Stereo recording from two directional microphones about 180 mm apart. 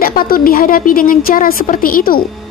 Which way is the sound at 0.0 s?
55° left (ahead or behind).